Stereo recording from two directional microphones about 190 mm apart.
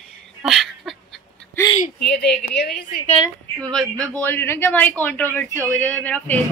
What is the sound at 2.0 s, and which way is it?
Speech, 60° left (ahead or behind).